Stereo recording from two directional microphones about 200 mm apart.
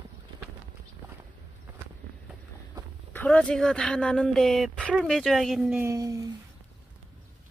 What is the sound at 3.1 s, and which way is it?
Speech, 10° left (ahead or behind).